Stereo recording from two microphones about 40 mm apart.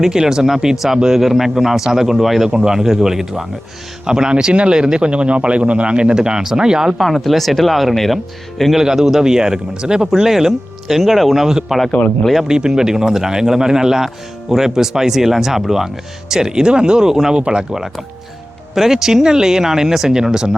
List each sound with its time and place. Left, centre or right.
0.0 s a man's voice: centre
1.2 s a man's voice: centre
7.0 s speech: centre
8.7 s a man's voice: centre
11.4 s a man's voice: centre
12.0 s speech: left
12.5 s a man's voice: centre
17.4 s speech: right
17.7 s a man's voice: centre